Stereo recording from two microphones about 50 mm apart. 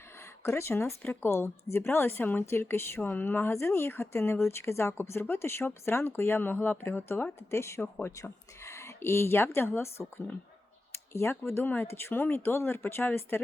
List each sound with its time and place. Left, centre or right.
0.4 s speech: left
1.0 s speech: left
1.3 s speech: left
2.5 s speech: left
3.0 s speech: left
3.5 s speech: left
7.5 s speech: left
7.8 s speech: left
8.1 s speech: left